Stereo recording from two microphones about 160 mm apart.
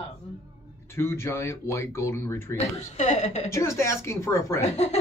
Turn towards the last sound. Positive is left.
turn(degrees=45)  # may be behind; listen again after turning